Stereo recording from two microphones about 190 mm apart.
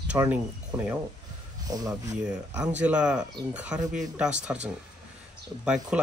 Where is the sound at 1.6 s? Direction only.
20° right (ahead or behind).